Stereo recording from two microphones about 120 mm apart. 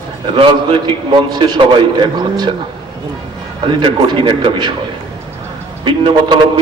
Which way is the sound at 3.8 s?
45° right (ahead or behind).